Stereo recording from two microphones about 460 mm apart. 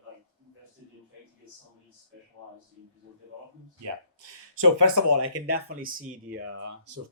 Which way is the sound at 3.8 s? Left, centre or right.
Right.